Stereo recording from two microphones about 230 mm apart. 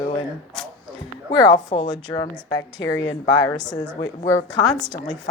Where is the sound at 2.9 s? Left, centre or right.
Left.